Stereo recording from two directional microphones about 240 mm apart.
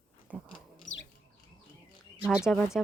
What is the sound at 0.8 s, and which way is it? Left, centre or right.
Bird, left.